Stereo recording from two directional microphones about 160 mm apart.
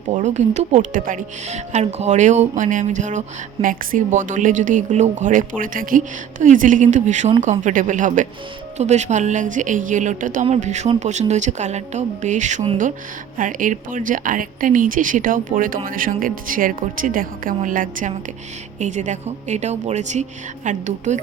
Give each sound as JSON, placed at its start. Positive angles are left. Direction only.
{"t": 0.1, "sound": "speech", "side_deg": -50}